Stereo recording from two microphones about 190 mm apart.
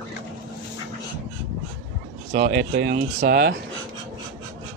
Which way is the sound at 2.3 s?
50° right (ahead or behind).